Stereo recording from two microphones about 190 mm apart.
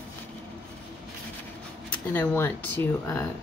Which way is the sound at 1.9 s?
10° left (ahead or behind).